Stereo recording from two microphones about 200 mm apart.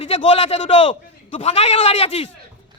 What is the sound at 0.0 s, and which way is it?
A man's voice, 30° left (ahead or behind).